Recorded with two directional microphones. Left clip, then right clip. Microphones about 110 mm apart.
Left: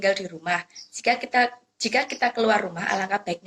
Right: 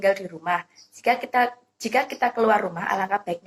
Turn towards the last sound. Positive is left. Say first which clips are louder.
# right 1 dB
turn(degrees=30)  # may be behind; listen again after turning